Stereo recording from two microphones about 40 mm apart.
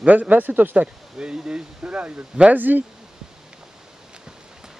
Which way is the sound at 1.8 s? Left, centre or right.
Right.